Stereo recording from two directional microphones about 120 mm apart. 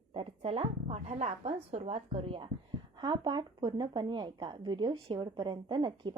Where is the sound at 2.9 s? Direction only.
40° right (ahead or behind).